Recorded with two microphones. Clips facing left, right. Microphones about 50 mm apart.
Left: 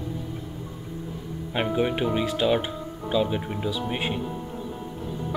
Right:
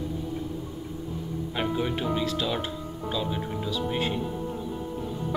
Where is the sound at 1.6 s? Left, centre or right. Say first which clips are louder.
Left 4 dB; left.